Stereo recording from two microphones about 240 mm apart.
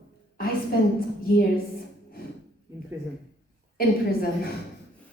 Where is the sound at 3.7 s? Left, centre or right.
Left.